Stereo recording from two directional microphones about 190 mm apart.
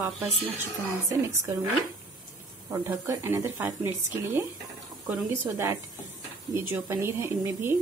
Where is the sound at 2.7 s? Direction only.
15° right (ahead or behind).